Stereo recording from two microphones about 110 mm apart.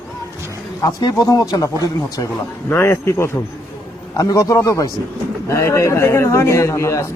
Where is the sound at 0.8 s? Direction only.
35° left (ahead or behind).